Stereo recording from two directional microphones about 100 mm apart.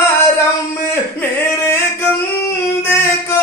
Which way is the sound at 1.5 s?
25° left (ahead or behind).